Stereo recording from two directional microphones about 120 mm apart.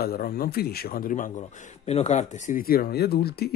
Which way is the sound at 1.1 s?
90° left.